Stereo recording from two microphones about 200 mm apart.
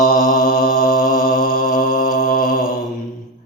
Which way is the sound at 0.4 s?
45° left (ahead or behind).